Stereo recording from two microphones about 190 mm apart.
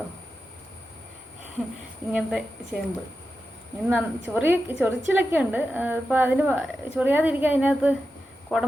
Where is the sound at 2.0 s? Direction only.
20° left (ahead or behind).